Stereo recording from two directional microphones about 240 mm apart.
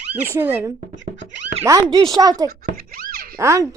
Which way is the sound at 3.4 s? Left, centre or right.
Centre.